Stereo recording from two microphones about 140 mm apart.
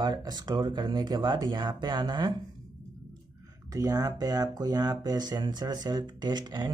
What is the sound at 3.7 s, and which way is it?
Speech, 25° right (ahead or behind).